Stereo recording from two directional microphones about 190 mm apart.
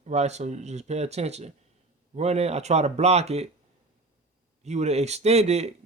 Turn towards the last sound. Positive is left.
turn(degrees=-35)  # may be behind; listen again after turning